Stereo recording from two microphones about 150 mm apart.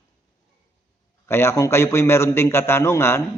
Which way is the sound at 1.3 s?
15° left (ahead or behind).